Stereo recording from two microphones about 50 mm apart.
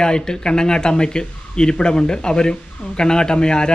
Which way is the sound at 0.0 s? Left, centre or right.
Centre.